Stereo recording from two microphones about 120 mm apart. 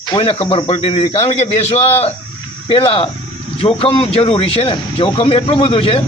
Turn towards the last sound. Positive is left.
turn(degrees=50)  # may be behind; listen again after turning